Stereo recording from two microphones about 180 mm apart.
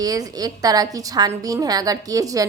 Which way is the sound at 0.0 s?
20° right (ahead or behind).